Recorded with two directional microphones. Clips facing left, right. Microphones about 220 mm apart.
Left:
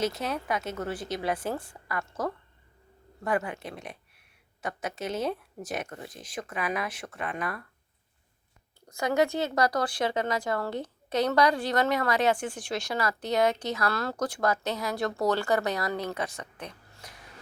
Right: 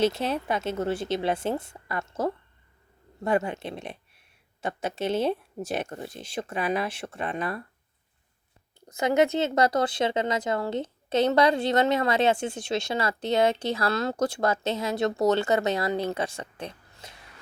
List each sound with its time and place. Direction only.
0.0 s speech: 30° right (ahead or behind)
8.9 s speech: 20° right (ahead or behind)